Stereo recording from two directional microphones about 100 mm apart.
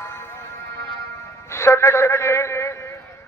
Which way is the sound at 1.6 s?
25° left (ahead or behind).